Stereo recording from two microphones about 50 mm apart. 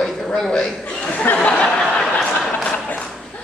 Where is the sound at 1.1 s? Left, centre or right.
Left.